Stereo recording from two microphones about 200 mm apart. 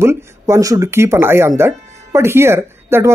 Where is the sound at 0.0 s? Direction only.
15° right (ahead or behind).